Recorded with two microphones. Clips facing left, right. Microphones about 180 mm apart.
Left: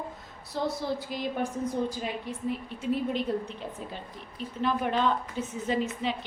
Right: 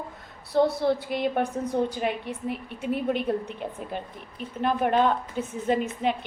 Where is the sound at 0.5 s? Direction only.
60° right (ahead or behind).